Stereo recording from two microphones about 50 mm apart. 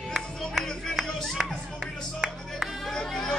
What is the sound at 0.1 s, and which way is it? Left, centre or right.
Music, centre.